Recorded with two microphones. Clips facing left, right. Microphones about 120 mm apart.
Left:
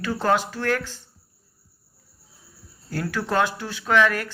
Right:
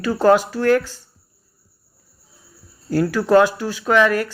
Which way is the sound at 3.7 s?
10° right (ahead or behind).